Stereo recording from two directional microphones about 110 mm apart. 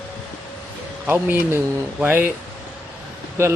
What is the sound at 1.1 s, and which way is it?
Speech, 20° right (ahead or behind).